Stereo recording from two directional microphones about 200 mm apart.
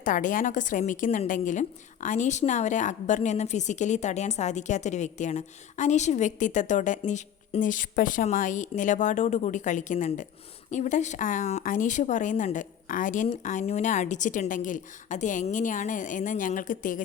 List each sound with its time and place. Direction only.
0.0 s a woman's voice: 40° left (ahead or behind)